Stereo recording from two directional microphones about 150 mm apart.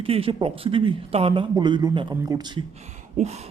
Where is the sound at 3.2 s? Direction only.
45° right (ahead or behind).